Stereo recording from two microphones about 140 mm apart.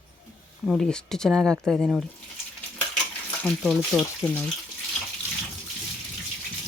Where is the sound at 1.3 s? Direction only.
10° right (ahead or behind).